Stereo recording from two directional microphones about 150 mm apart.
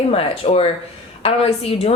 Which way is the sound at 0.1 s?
40° left (ahead or behind).